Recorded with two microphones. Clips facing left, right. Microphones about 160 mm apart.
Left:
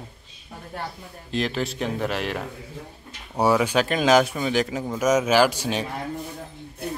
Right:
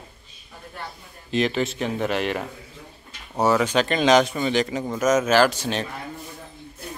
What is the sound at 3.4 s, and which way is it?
Speech, 10° left (ahead or behind).